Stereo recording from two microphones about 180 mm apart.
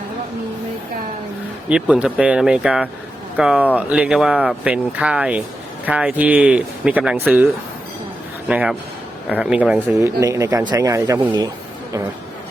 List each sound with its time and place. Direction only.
1.7 s speech: 5° right (ahead or behind)
8.4 s speech: 5° right (ahead or behind)
9.8 s speech: 15° right (ahead or behind)